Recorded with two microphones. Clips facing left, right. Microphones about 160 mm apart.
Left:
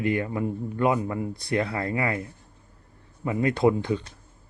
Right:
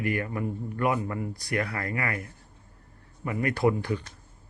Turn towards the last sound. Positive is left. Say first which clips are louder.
# left 3 dB
turn(degrees=20)  # may be behind; listen again after turning